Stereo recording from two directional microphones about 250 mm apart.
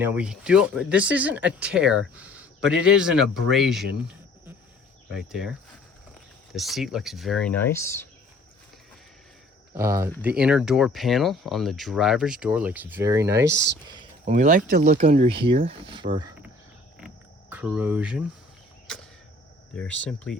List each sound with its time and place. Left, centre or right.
0.0 s speech: centre
2.1 s a sound: centre
2.8 s speech: centre
5.1 s speech: centre
9.7 s speech: centre
13.8 s a sound: centre
14.3 s speech: right
17.5 s speech: centre
19.7 s speech: centre